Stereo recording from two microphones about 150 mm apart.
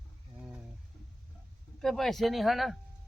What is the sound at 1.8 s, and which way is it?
Speech, centre (ahead or behind).